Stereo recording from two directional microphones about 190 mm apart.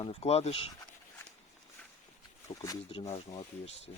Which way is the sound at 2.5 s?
30° left (ahead or behind).